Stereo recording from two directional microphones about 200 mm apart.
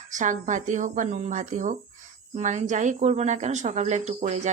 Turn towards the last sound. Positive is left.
turn(degrees=-35)  # may be behind; listen again after turning